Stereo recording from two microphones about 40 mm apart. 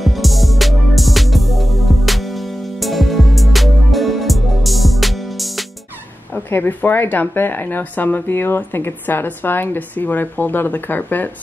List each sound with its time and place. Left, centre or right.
0.0 s music: centre
6.3 s speech: left
8.3 s speech: left